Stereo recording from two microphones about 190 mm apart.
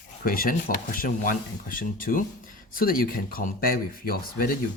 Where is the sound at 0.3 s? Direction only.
50° left (ahead or behind).